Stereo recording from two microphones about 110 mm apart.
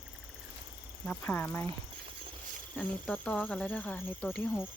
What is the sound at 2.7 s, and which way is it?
Speech, 15° left (ahead or behind).